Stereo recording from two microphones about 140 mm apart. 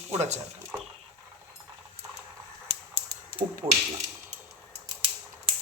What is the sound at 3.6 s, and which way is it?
Speech, 15° right (ahead or behind).